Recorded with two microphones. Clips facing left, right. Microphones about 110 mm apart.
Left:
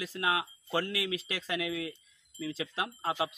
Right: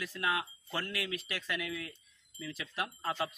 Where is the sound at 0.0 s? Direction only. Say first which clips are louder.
Left 3 dB; 25° left (ahead or behind).